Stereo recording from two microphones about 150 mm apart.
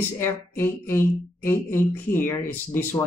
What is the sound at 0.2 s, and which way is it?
Speech, 15° left (ahead or behind).